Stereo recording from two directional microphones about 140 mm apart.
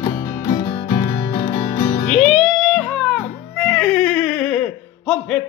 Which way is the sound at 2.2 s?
Centre (ahead or behind).